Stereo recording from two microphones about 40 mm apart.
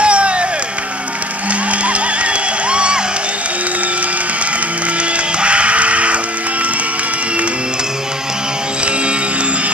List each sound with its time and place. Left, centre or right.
0.0 s music: right
1.9 s music: right
5.4 s music: right